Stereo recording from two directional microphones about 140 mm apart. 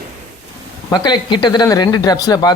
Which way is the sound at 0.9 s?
30° left (ahead or behind).